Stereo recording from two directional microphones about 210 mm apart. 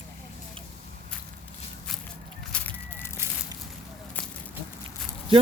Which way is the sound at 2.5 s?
10° left (ahead or behind).